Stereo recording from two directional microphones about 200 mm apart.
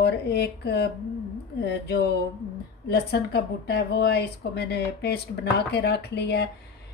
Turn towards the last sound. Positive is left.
turn(degrees=55)  # may be behind; listen again after turning